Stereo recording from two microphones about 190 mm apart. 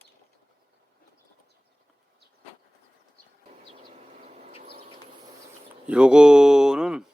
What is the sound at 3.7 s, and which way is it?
Vehicle, 30° right (ahead or behind).